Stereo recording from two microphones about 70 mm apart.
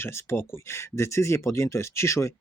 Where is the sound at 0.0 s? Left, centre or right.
Left.